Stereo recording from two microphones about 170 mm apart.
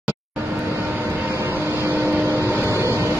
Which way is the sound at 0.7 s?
10° right (ahead or behind).